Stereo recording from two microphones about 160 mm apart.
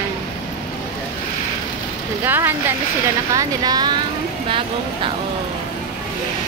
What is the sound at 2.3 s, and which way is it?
Speech, 15° right (ahead or behind).